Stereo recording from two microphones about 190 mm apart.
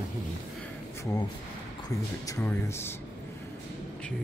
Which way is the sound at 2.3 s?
15° left (ahead or behind).